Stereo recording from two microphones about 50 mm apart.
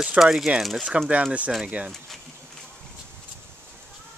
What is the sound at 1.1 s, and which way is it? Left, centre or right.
Speech, right.